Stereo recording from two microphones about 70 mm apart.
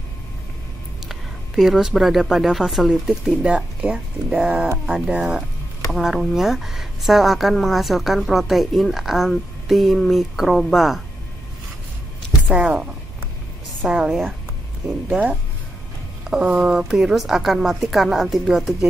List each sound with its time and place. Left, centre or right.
1.0 s speech: centre
5.9 s a woman's voice: centre
12.4 s speech: centre
13.8 s speech: centre
16.3 s a woman's voice: centre